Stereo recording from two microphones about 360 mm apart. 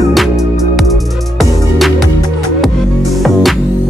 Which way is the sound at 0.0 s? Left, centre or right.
Centre.